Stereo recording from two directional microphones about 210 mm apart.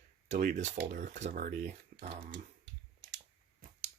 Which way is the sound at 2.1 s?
50° right (ahead or behind).